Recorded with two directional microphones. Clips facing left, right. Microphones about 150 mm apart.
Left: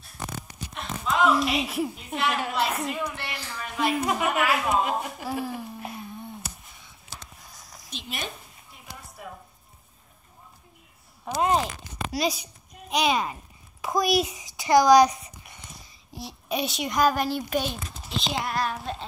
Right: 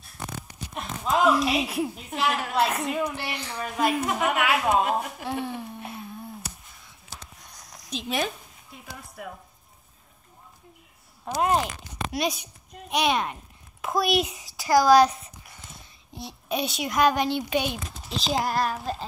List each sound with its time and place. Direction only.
0.7 s a woman's voice: centre (ahead or behind)
7.3 s a sound: centre (ahead or behind)
9.2 s speech: 60° right (ahead or behind)
11.2 s a child's voice: centre (ahead or behind)
14.9 s speech: 15° left (ahead or behind)
15.5 s a child's voice: centre (ahead or behind)